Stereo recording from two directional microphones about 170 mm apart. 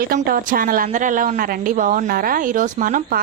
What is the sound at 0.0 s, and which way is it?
A woman's voice, 60° right (ahead or behind).